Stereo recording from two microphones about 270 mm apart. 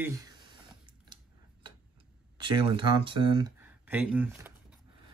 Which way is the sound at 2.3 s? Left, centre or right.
Centre.